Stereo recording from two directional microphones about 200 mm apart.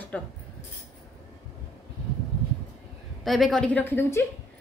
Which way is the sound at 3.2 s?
Centre (ahead or behind).